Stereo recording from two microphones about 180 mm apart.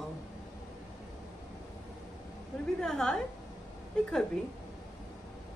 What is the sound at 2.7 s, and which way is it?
Speech, 5° left (ahead or behind).